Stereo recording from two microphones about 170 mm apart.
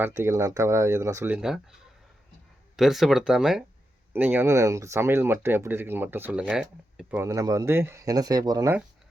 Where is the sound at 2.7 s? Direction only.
Centre (ahead or behind); by 8.7 s 20° right (ahead or behind).